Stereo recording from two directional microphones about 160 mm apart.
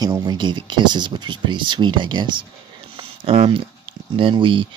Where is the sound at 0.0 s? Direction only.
25° right (ahead or behind).